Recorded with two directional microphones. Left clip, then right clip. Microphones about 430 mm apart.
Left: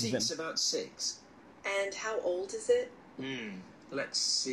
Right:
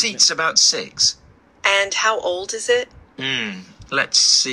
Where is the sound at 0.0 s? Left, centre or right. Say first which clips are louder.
Right 16 dB; right.